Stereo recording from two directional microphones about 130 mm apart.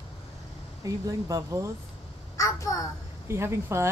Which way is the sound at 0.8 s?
25° right (ahead or behind).